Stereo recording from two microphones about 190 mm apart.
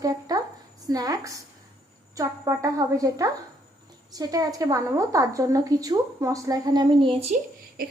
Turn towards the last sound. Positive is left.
turn(degrees=-50)  # may be behind; listen again after turning